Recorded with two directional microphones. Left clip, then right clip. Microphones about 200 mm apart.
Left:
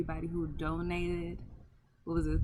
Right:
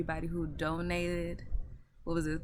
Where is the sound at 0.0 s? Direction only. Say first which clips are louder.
Right 1 dB; 10° right (ahead or behind).